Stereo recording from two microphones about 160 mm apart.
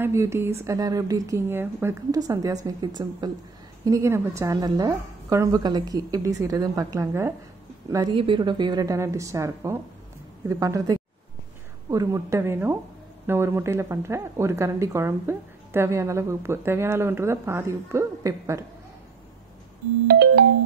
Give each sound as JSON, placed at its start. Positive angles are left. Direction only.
{"t": 0.0, "sound": "a woman's voice", "side_deg": -15}
{"t": 20.1, "sound": "ringtone", "side_deg": -90}